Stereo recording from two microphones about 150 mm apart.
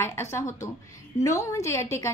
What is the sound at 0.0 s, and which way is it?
A woman's voice, 15° left (ahead or behind).